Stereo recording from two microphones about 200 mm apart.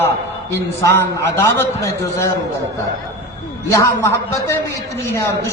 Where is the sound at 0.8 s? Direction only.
15° left (ahead or behind).